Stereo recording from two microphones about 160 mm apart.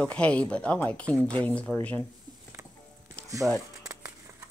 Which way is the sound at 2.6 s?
20° right (ahead or behind).